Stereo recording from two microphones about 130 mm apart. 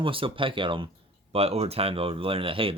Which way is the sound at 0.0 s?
40° right (ahead or behind).